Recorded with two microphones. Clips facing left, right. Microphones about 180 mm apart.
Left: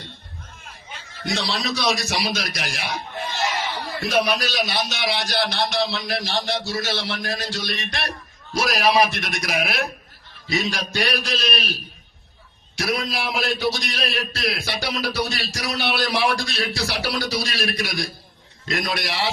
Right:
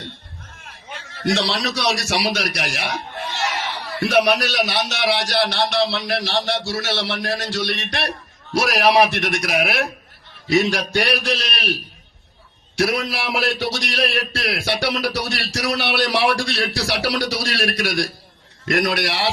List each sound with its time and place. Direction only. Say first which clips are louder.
0.9 s a man's voice: right 7 dB; 70° right (ahead or behind)
4.0 s a man's voice: right 5 dB; 70° right (ahead or behind)